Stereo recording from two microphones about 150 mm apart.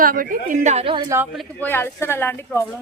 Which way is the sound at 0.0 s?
70° right (ahead or behind).